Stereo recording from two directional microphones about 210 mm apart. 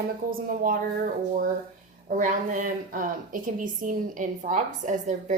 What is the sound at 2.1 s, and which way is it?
A woman's voice, 40° right (ahead or behind).